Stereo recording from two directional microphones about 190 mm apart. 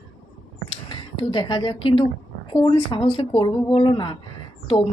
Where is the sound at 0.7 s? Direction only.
25° left (ahead or behind).